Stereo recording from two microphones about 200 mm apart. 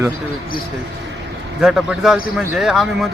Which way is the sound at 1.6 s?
Centre (ahead or behind).